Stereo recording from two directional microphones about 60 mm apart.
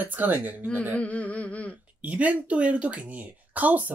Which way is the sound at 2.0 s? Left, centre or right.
Right.